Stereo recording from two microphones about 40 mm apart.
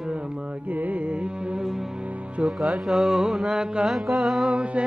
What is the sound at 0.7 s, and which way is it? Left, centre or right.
Music, right.